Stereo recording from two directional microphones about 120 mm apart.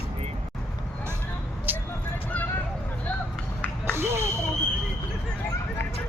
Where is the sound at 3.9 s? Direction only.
20° right (ahead or behind).